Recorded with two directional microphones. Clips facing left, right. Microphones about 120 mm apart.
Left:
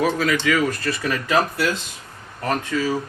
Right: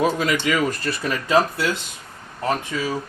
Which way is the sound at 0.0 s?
25° right (ahead or behind).